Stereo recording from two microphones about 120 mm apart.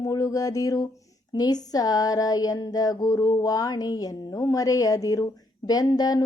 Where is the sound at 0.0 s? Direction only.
30° left (ahead or behind).